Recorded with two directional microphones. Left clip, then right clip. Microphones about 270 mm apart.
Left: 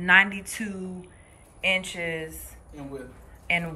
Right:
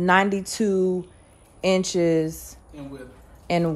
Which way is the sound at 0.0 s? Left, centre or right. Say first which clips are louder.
Even; centre.